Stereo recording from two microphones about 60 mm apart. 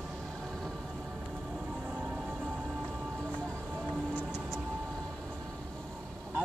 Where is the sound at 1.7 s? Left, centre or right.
Centre.